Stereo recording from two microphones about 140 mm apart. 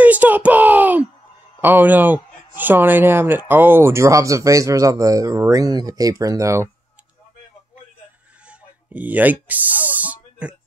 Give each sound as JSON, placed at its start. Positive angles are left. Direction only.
{"t": 0.0, "sound": "a sound", "side_deg": -10}
{"t": 1.6, "sound": "speech", "side_deg": -15}
{"t": 8.5, "sound": "speech", "side_deg": -10}